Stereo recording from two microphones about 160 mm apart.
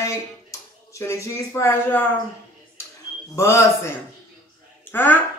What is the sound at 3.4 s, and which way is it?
A woman's voice, 15° left (ahead or behind).